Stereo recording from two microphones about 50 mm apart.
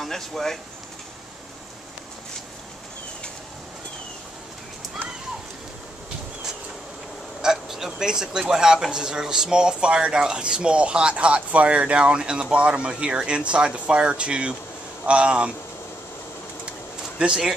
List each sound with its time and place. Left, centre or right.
0.0 s speech: centre
7.4 s speech: centre; by 15.5 s right
17.2 s speech: centre